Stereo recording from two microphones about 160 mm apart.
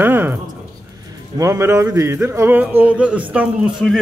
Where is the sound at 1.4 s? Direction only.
15° right (ahead or behind).